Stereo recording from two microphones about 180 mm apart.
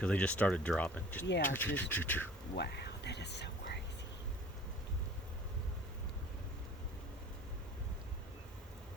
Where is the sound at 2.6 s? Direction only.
65° left (ahead or behind).